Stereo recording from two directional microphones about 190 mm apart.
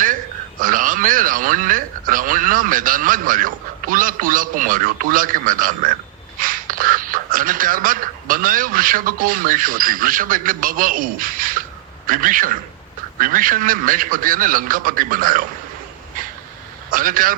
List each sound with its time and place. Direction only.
0.6 s speech: 45° right (ahead or behind)
16.9 s speech: 45° right (ahead or behind)